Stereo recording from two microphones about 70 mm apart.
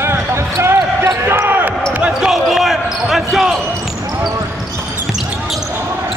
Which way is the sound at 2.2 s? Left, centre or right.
Centre.